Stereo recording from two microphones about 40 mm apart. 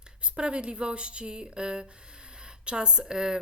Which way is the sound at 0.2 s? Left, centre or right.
Right.